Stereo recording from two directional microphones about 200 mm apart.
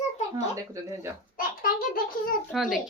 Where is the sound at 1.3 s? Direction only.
45° left (ahead or behind).